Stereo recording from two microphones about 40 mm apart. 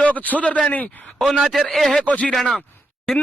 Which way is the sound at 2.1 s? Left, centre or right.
Left.